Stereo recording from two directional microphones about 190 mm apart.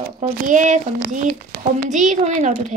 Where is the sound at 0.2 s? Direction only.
40° right (ahead or behind).